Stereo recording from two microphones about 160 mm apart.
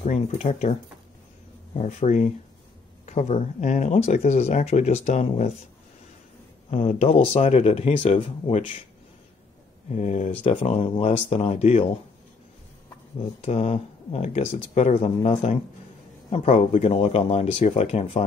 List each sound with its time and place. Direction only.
0.0 s speech: 50° left (ahead or behind)
6.7 s speech: 40° left (ahead or behind)
9.8 s speech: 45° left (ahead or behind)
10.5 s speech: 35° left (ahead or behind)
13.4 s a man's voice: 40° left (ahead or behind)